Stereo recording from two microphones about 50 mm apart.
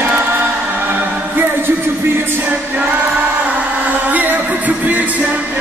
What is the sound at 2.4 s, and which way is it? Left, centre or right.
Music, right.